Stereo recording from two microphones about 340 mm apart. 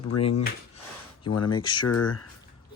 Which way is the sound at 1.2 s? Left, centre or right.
Left.